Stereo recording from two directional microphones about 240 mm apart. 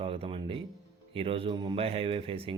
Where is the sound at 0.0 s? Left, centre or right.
Right.